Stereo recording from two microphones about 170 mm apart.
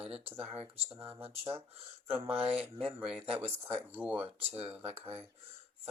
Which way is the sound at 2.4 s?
35° right (ahead or behind).